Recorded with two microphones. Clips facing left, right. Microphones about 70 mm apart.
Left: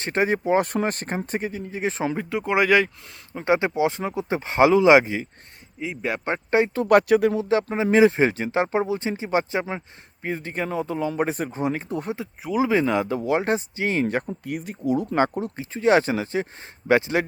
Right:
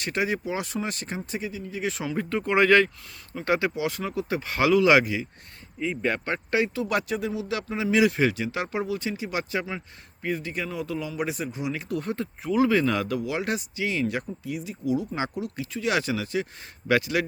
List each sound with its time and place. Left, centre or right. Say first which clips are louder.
0.0 s speech: left 5 dB; left
2.1 s speech: right 3 dB; centre
3.3 s speech: left 4 dB; left
5.8 s speech: right 1 dB; centre
6.2 s speech: left 8 dB; left
6.7 s speech: left 10 dB; left
7.3 s speech: left 7 dB; left
11.9 s speech: left 1 dB; left
12.1 s speech: right 1 dB; centre
13.1 s speech: left 6 dB; left
14.3 s speech: left 3 dB; left